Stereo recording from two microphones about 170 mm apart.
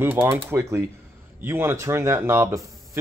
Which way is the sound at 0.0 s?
10° right (ahead or behind).